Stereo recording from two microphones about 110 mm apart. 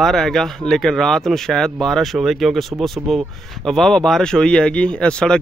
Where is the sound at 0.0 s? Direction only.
Centre (ahead or behind).